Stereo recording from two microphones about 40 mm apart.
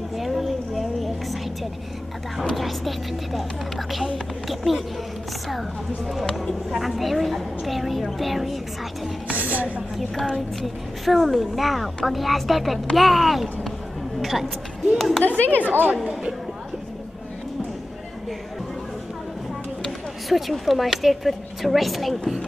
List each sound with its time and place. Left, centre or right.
0.2 s a sound: centre
2.5 s a woman's voice: centre
4.5 s a sound: centre
6.7 s a woman's voice: centre
9.3 s a woman's voice: right
10.6 s a woman's voice: centre
15.0 s a woman's voice: centre
15.2 s speech: left
15.7 s speech: right
16.0 s speech: centre
19.8 s speech: centre